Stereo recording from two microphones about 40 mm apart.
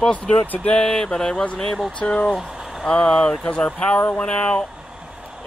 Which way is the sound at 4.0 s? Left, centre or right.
Left.